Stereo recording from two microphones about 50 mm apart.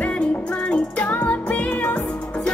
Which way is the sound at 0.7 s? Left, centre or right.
Left.